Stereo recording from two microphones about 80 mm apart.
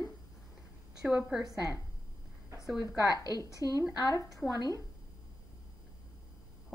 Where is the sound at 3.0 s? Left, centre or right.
Left.